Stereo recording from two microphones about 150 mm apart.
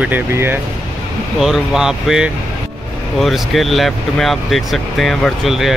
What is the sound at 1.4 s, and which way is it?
Speech, centre (ahead or behind).